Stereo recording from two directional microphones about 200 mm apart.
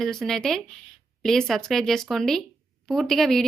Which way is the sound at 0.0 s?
Centre (ahead or behind).